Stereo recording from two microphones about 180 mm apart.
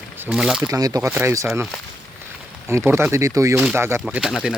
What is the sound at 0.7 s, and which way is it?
Speech, 20° right (ahead or behind).